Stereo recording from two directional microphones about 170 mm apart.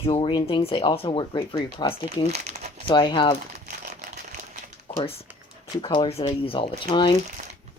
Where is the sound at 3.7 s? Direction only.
45° right (ahead or behind).